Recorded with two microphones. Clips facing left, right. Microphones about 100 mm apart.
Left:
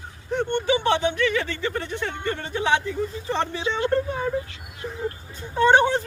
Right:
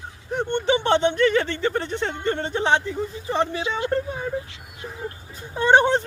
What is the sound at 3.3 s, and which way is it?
Speech, 10° right (ahead or behind).